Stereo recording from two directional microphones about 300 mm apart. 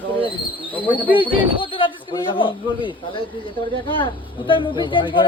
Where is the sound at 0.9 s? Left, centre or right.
Centre.